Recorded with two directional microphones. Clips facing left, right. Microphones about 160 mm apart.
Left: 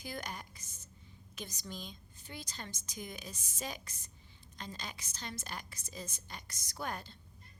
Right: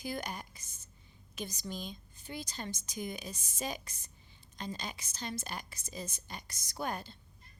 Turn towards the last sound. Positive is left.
turn(degrees=-15)  # may be behind; listen again after turning